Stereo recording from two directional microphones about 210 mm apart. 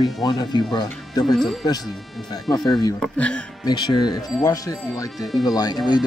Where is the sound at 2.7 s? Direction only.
20° left (ahead or behind).